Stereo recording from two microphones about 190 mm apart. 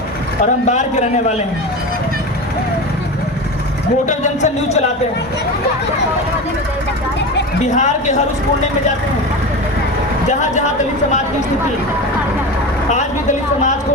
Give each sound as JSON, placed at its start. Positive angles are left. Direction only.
{"t": 0.7, "sound": "speech", "side_deg": 40}
{"t": 4.0, "sound": "speech", "side_deg": 40}
{"t": 7.6, "sound": "speech", "side_deg": 40}
{"t": 10.2, "sound": "speech", "side_deg": 40}